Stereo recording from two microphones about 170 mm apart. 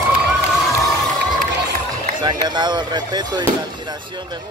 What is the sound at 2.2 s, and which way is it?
Speech, 25° right (ahead or behind).